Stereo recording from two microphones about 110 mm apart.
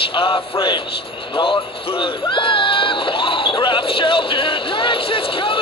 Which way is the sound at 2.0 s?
50° left (ahead or behind).